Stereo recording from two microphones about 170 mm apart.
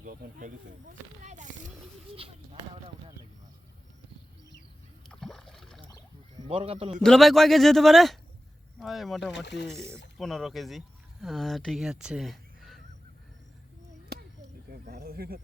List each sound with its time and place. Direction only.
0.0 s speech: 55° right (ahead or behind)
2.1 s speech: 35° right (ahead or behind)
5.0 s rowboat: centre (ahead or behind)
6.5 s speech: 35° right (ahead or behind)
6.9 s a man's voice: centre (ahead or behind)
9.3 s speech: 90° left
9.7 s speech: 15° right (ahead or behind)
10.2 s speech: centre (ahead or behind)
14.7 s snake: 65° right (ahead or behind)